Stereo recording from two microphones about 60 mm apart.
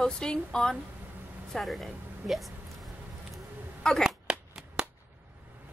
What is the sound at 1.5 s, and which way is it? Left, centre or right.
Speech, centre.